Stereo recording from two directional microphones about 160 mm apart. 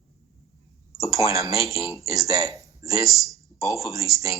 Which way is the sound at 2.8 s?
20° right (ahead or behind).